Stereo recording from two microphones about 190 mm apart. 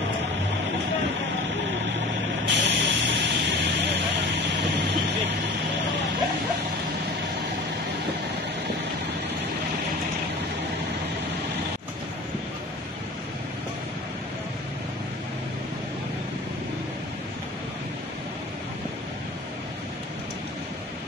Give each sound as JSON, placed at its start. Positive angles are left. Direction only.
{"t": 2.4, "sound": "vehicle", "side_deg": -65}